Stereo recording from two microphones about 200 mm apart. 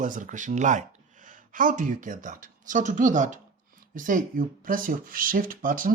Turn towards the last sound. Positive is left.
turn(degrees=-45)  # may be behind; listen again after turning